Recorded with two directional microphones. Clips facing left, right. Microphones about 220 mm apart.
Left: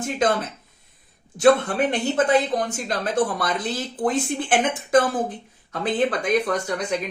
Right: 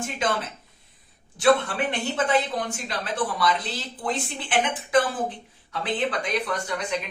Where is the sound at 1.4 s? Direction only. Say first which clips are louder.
Left 4 dB; 45° left (ahead or behind).